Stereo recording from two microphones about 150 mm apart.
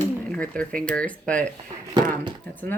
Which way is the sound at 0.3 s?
10° left (ahead or behind).